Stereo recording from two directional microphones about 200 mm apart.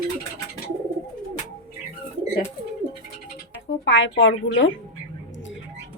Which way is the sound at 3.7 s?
70° left (ahead or behind).